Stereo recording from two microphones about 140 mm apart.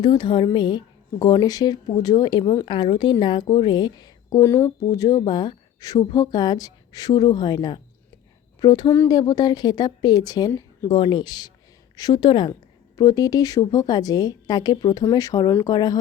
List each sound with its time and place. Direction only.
0.0 s a woman's voice: 35° left (ahead or behind)
10.5 s a sound: 15° left (ahead or behind)
10.8 s a woman's voice: 35° left (ahead or behind)